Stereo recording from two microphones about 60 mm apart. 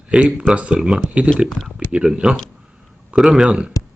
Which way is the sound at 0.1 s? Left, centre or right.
Centre.